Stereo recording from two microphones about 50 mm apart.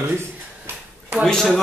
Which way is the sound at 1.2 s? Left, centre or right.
Centre.